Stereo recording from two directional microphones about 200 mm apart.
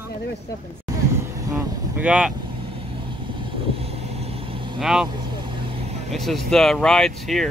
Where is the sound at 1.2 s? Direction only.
15° right (ahead or behind).